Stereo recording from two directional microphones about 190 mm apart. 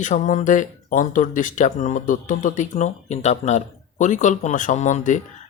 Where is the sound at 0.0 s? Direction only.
40° left (ahead or behind).